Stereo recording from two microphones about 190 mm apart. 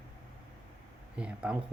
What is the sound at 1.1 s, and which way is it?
Speech, 5° right (ahead or behind).